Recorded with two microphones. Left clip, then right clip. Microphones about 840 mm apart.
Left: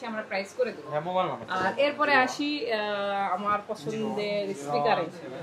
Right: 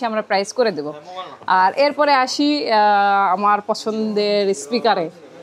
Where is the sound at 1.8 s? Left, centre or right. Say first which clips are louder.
Right 8 dB; right.